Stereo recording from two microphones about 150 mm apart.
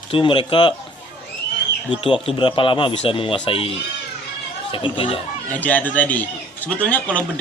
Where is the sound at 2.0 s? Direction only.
35° left (ahead or behind).